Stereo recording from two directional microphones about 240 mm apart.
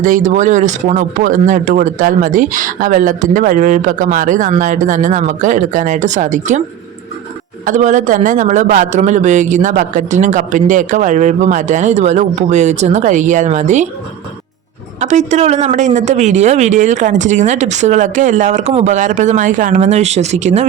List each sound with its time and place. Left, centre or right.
0.0 s speech: right
7.7 s speech: right
15.0 s speech: right